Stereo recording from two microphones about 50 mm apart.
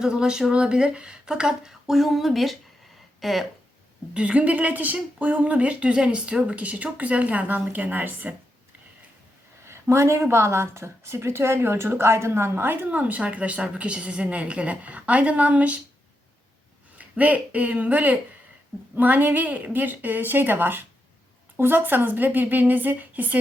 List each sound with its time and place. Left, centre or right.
0.0 s speech: centre
1.9 s speech: centre
4.1 s a woman's voice: right
9.6 s a sound: right
10.2 s a woman's voice: right
12.9 s a woman's voice: right
17.0 s a woman's voice: right